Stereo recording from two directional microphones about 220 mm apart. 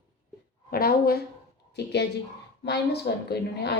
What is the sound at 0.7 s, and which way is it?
A woman's voice, 45° left (ahead or behind).